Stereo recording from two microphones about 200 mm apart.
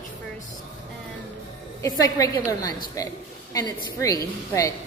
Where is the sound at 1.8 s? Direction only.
15° left (ahead or behind).